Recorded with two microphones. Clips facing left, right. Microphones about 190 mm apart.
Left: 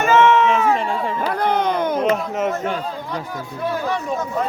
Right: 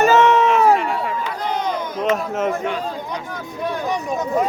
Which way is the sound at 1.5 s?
60° left (ahead or behind).